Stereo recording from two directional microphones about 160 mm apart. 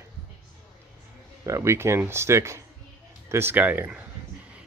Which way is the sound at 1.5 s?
15° right (ahead or behind).